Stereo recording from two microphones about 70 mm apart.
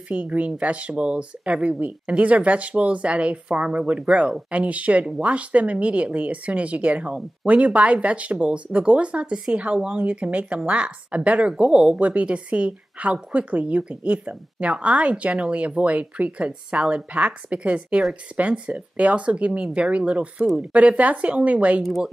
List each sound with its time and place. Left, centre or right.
0.1 s speech: centre
21.8 s speech: centre